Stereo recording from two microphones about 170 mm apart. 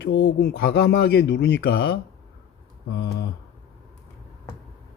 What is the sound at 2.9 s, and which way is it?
Speech, 75° left (ahead or behind).